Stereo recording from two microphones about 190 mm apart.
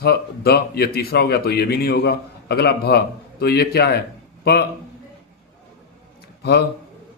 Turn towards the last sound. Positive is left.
turn(degrees=60)  # may be behind; listen again after turning